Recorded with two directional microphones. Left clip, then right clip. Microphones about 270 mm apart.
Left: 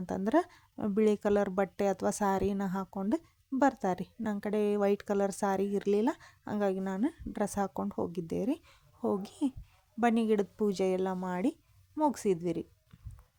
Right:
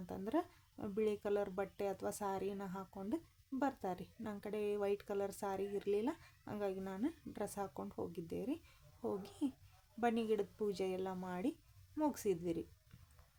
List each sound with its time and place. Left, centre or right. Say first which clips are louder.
0.0 s speech: left 11 dB; left